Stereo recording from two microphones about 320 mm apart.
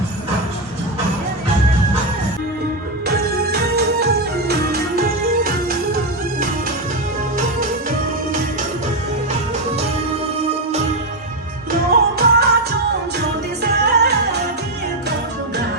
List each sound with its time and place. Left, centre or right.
3.1 s music: right
11.9 s music: right
13.6 s music: right